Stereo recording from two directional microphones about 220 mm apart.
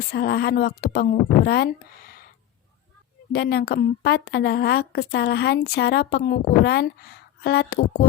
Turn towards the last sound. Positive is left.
turn(degrees=45)  # may be behind; listen again after turning